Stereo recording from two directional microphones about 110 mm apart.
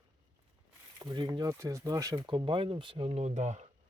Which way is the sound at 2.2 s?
50° right (ahead or behind).